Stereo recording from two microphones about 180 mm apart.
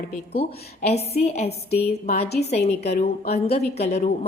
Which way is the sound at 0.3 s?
35° left (ahead or behind).